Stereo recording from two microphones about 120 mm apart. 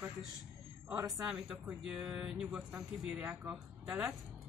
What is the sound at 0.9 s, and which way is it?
Speech, 25° right (ahead or behind).